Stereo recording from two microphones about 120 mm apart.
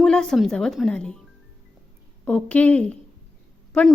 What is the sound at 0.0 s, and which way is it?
Speech, 5° left (ahead or behind).